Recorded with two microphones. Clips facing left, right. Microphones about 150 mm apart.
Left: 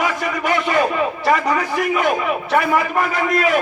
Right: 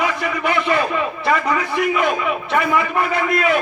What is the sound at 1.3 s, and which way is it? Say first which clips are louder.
Speech: left 1 dB; 40° left (ahead or behind).